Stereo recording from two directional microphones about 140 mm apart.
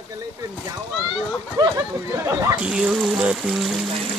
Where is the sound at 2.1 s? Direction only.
20° right (ahead or behind).